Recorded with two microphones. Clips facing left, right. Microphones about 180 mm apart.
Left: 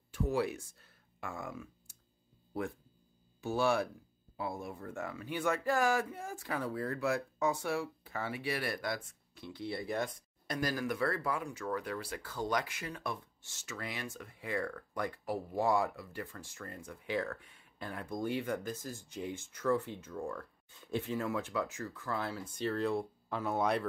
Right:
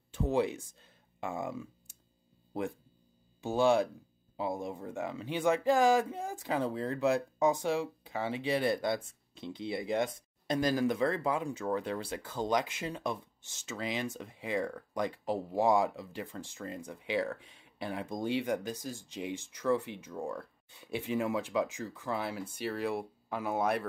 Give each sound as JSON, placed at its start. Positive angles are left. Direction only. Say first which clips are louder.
{"t": 0.1, "sound": "speech", "louder": "right 3 dB", "side_deg": -25}
{"t": 3.3, "sound": "speech", "louder": "right 4 dB", "side_deg": -20}
{"t": 17.4, "sound": "speech", "louder": "right 3 dB", "side_deg": -90}
{"t": 17.7, "sound": "speech", "louder": "right 3 dB", "side_deg": -15}